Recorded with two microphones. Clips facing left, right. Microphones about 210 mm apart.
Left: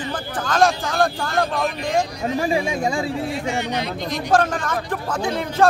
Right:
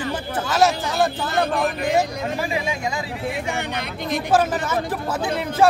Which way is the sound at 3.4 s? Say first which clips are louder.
Left 3 dB; 55° right (ahead or behind).